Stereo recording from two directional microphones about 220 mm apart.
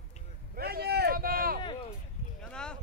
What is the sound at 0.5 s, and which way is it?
Vehicle, 45° right (ahead or behind).